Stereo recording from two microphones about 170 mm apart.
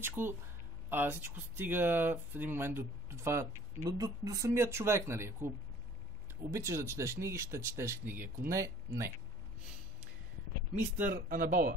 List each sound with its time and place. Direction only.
0.0 s speech: 15° right (ahead or behind)
6.5 s speech: 15° right (ahead or behind)
11.1 s speech: 55° right (ahead or behind)